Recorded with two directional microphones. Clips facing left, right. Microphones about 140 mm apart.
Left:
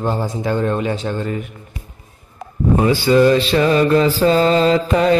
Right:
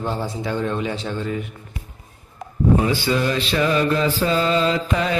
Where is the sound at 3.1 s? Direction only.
45° left (ahead or behind).